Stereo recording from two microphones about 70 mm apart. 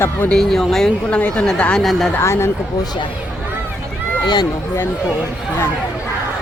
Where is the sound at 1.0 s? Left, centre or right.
Centre.